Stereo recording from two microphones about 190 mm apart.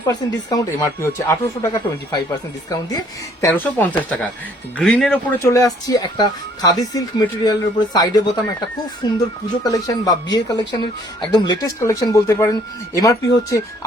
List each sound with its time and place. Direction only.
0.1 s speech: 20° left (ahead or behind)
3.4 s speech: 10° left (ahead or behind)